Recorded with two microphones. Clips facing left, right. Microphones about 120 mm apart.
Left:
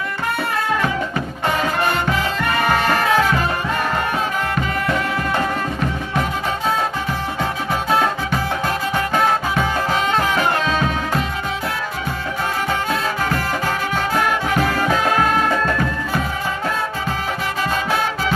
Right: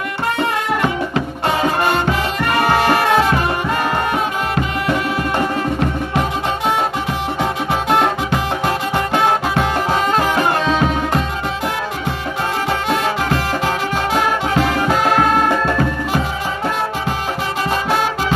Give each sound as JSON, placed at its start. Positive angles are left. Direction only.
{"t": 8.6, "sound": "music", "side_deg": -15}